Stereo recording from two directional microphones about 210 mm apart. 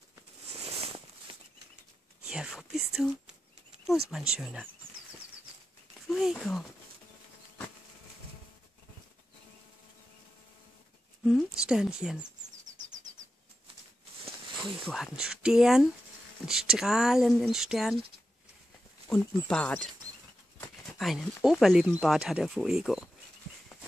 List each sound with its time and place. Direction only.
0.7 s a sound: 25° right (ahead or behind)
2.2 s speech: 5° right (ahead or behind)
6.0 s speech: centre (ahead or behind)
11.2 s speech: centre (ahead or behind)
12.6 s bird: 35° right (ahead or behind)
14.6 s speech: centre (ahead or behind)
19.0 s speech: 5° left (ahead or behind)